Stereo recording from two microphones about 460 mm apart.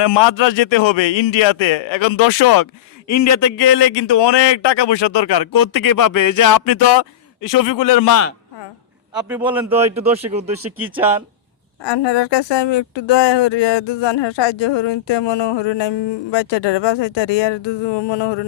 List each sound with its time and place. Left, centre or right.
0.0 s a man's voice: left
3.1 s a man's voice: left
9.3 s a man's voice: centre
11.8 s speech: left